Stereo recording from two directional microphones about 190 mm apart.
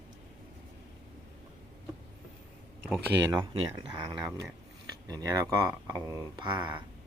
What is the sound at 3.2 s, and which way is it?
Speech, 15° right (ahead or behind).